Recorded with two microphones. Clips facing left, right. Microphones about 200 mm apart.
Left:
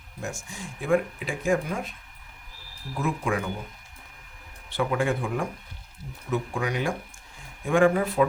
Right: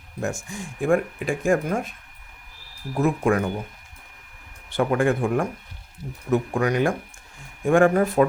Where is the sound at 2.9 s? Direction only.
45° right (ahead or behind).